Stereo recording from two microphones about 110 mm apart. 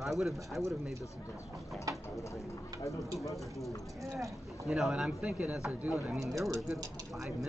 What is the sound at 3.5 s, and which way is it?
Speech, centre (ahead or behind).